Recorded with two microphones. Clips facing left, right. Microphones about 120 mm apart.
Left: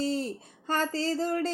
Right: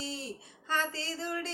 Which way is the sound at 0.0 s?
45° left (ahead or behind).